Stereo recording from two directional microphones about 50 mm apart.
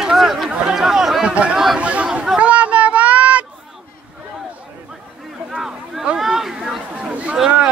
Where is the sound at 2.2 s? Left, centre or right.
Right.